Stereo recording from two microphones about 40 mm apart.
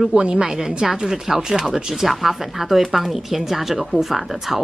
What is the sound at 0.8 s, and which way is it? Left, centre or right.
Speech, centre.